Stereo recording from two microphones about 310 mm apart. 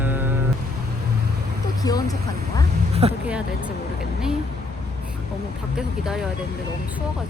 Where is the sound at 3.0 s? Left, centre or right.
Centre.